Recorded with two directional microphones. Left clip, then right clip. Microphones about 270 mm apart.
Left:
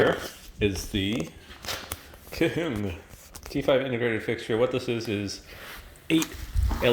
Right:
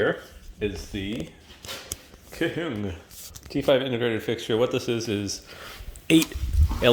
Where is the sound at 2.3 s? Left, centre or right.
Centre.